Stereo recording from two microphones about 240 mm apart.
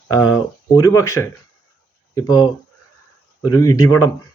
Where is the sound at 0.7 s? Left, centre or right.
Centre.